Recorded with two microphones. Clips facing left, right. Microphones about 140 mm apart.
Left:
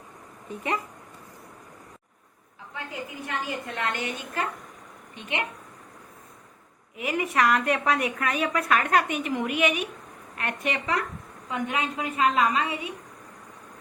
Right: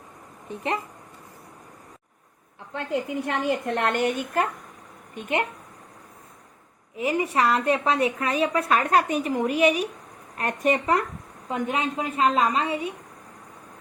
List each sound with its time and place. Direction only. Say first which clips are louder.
2.7 s a woman's voice: right 9 dB; 65° right (ahead or behind)
5.1 s a woman's voice: right 5 dB; 45° right (ahead or behind)
6.9 s a woman's voice: right 3 dB; 30° right (ahead or behind)